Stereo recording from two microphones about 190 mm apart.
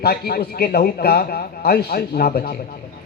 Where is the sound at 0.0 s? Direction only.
55° left (ahead or behind).